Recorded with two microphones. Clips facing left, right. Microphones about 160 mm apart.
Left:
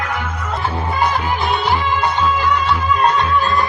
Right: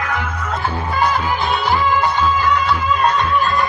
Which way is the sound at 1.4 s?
20° left (ahead or behind).